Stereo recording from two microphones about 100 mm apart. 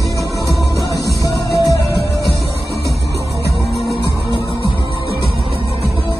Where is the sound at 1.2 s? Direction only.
35° left (ahead or behind).